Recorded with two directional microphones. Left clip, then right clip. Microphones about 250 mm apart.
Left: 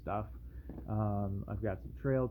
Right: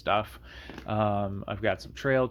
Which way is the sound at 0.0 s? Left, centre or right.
Right.